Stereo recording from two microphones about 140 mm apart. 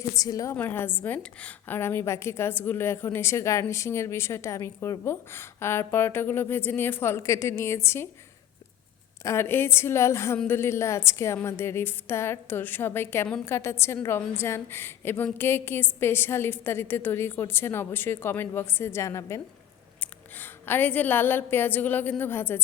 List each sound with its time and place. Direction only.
0.2 s a woman's voice: 25° left (ahead or behind)
0.5 s a woman's voice: 15° left (ahead or behind)
9.2 s a woman's voice: 20° left (ahead or behind)